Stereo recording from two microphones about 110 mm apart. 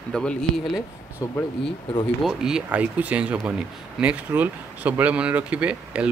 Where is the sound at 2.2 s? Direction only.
5° right (ahead or behind).